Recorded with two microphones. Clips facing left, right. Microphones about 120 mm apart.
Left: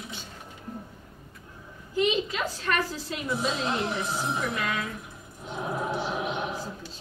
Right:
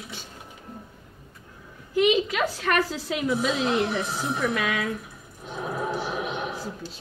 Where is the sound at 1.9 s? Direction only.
80° right.